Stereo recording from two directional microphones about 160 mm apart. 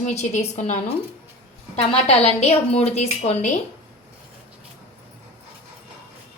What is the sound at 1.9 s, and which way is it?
A woman's voice, 40° left (ahead or behind).